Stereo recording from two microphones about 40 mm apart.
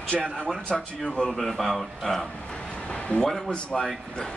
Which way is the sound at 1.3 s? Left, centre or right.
Centre.